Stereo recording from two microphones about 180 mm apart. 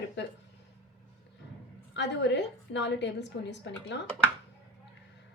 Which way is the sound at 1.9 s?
75° left (ahead or behind).